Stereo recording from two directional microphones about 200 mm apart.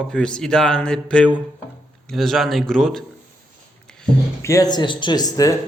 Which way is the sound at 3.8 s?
5° left (ahead or behind).